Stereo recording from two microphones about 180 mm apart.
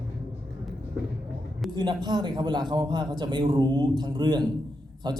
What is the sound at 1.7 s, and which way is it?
A man's voice, 25° right (ahead or behind).